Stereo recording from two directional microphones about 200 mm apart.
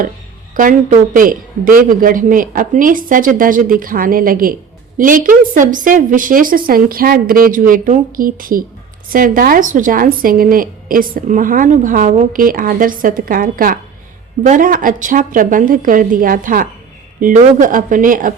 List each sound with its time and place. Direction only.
0.5 s a woman's voice: 40° right (ahead or behind)